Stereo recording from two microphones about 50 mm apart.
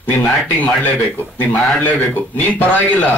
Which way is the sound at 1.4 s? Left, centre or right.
Left.